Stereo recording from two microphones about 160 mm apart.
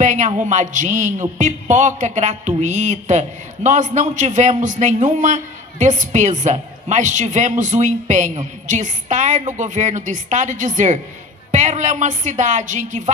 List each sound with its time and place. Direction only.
0.0 s a man's voice: 50° right (ahead or behind)